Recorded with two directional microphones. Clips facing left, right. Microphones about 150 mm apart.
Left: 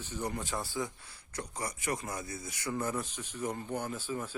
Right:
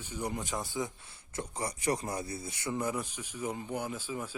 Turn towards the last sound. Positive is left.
turn(degrees=-10)  # may be behind; listen again after turning